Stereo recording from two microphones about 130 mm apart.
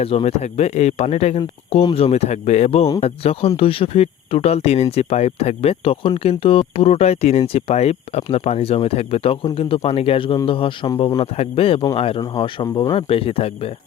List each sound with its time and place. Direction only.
0.0 s speech: 50° left (ahead or behind)
1.7 s speech: 45° left (ahead or behind)